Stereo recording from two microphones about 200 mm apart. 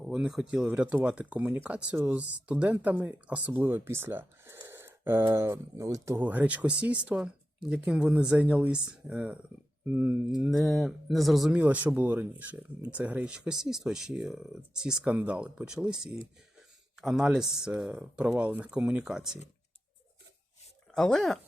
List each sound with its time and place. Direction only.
0.0 s speech: centre (ahead or behind)
20.9 s speech: centre (ahead or behind)